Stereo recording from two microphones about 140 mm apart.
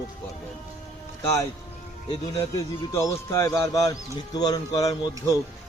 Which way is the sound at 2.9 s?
20° left (ahead or behind).